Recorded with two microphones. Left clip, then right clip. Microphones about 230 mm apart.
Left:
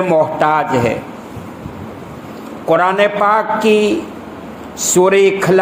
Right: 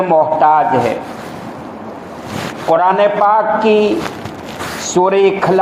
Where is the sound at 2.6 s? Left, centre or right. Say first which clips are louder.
Right 1 dB; left.